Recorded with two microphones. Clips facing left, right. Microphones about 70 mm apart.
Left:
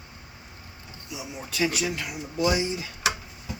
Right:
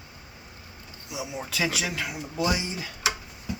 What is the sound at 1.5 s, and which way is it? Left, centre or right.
Speech, right.